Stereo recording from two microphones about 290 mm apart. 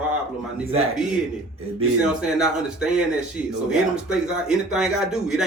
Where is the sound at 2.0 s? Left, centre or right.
Centre.